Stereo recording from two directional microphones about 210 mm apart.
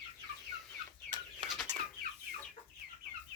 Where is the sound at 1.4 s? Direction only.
Centre (ahead or behind).